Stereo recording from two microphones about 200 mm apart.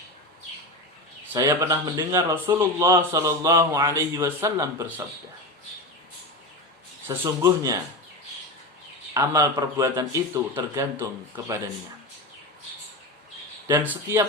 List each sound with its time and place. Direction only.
1.3 s speech: 15° right (ahead or behind)
7.1 s speech: 20° right (ahead or behind)
9.1 s speech: 15° right (ahead or behind)
13.8 s speech: 15° right (ahead or behind)